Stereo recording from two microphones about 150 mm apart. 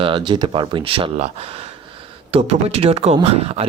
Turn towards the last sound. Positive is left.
turn(degrees=-40)  # may be behind; listen again after turning